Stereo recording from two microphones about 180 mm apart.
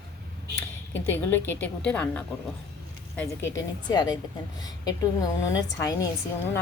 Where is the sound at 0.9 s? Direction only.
10° left (ahead or behind).